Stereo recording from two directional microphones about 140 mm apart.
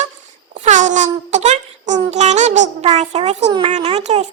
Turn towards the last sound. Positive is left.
turn(degrees=-50)  # may be behind; listen again after turning